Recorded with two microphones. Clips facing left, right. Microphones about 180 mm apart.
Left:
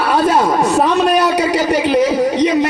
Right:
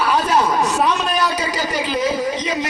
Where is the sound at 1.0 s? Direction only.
65° left (ahead or behind).